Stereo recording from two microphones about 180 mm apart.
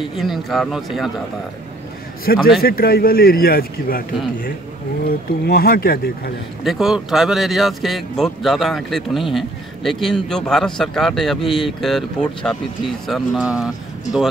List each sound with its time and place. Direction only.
0.2 s a man's voice: centre (ahead or behind)
2.3 s speech: 60° left (ahead or behind)
5.0 s speech: 55° left (ahead or behind)
6.6 s a man's voice: centre (ahead or behind)